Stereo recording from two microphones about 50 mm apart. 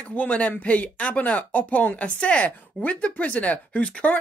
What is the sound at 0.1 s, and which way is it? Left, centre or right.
Speech, left.